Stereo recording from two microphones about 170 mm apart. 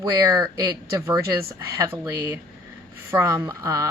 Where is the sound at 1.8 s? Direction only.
15° right (ahead or behind).